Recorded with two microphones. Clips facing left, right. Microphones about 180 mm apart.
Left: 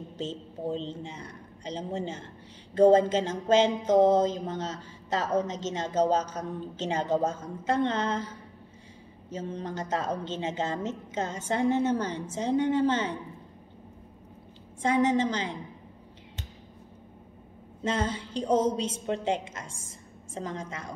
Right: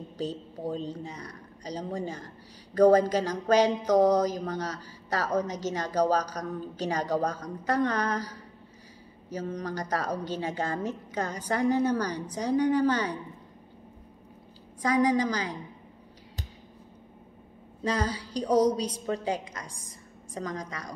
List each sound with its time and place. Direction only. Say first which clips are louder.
0.2 s a woman's voice: right 1 dB; 25° left (ahead or behind)
14.8 s a woman's voice: even; 25° left (ahead or behind)
17.8 s a woman's voice: even; 25° left (ahead or behind)